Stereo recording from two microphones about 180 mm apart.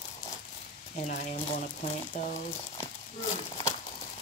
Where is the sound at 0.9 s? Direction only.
45° left (ahead or behind).